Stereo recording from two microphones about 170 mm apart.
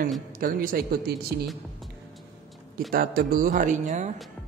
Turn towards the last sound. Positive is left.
turn(degrees=-45)  # may be behind; listen again after turning